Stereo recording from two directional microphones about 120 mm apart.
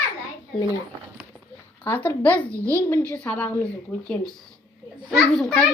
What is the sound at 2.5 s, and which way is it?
Speech, 25° right (ahead or behind).